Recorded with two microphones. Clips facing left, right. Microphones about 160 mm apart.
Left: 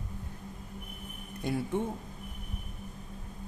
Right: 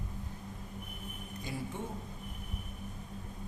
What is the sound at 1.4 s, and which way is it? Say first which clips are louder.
Speech: left 9 dB; 60° left (ahead or behind).